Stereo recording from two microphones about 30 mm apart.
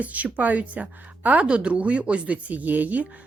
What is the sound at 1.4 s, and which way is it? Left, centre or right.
Speech, right.